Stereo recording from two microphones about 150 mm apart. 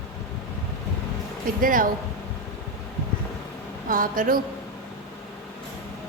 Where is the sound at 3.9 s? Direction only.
65° right (ahead or behind).